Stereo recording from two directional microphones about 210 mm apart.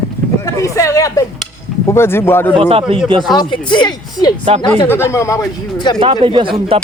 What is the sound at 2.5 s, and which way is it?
Speech, 25° right (ahead or behind).